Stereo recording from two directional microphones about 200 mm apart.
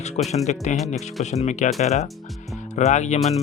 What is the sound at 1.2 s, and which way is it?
Speech, 35° left (ahead or behind).